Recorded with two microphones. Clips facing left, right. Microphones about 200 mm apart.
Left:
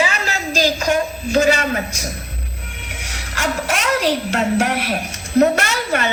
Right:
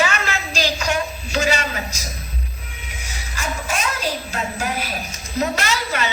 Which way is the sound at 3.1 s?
85° left.